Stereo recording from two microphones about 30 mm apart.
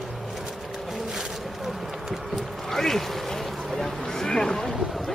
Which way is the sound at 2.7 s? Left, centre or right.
Centre.